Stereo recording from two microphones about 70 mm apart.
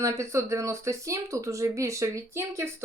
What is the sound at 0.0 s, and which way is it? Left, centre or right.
Speech, right.